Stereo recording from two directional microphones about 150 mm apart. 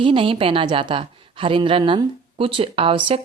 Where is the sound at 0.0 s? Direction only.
35° right (ahead or behind).